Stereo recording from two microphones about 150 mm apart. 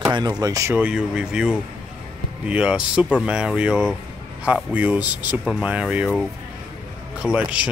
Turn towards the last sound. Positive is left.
turn(degrees=-10)  # may be behind; listen again after turning